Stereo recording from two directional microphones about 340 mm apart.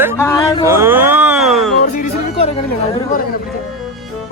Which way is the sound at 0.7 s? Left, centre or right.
Centre.